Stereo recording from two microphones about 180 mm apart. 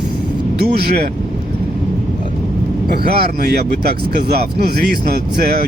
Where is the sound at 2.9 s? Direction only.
60° right (ahead or behind).